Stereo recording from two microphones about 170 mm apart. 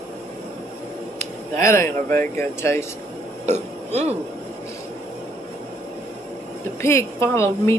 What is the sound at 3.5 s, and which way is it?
Speech, 40° right (ahead or behind).